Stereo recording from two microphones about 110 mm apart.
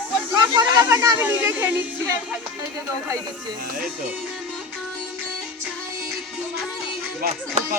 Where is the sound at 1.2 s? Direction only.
20° right (ahead or behind).